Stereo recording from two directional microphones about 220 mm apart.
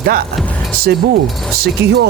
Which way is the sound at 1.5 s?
45° right (ahead or behind).